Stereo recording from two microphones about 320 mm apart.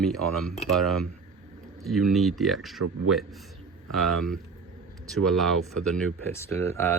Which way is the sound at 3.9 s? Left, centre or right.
Centre.